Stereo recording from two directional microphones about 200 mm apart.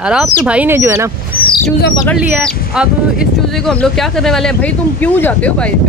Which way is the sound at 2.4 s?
5° right (ahead or behind).